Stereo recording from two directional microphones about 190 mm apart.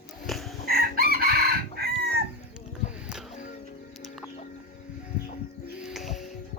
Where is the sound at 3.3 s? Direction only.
40° left (ahead or behind).